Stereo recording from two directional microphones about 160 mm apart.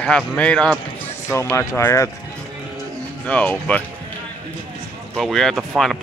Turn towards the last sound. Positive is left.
turn(degrees=0)  # may be behind; listen again after turning